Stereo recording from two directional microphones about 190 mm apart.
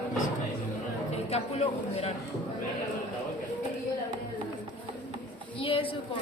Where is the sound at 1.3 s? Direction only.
35° left (ahead or behind).